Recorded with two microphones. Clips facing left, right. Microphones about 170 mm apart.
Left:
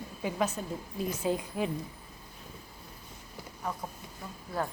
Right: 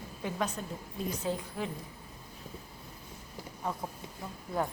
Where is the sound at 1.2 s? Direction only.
15° left (ahead or behind).